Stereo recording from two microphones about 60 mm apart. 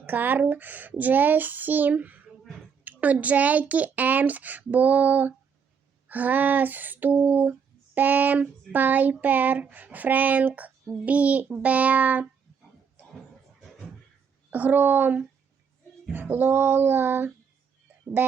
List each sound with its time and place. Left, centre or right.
0.0 s speech: right
7.9 s child singing: right
8.7 s speech: right
14.5 s child singing: right